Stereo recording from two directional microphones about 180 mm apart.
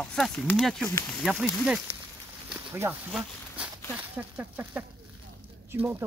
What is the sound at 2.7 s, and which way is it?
Speech, 15° right (ahead or behind).